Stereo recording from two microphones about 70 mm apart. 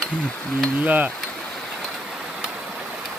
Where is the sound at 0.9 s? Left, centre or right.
Right.